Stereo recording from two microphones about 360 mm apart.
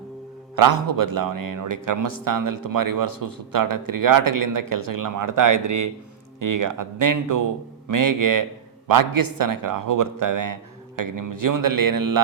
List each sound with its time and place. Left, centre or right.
0.5 s a man's voice: right